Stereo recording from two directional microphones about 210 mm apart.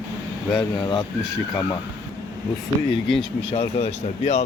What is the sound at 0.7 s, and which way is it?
Speech, 20° left (ahead or behind).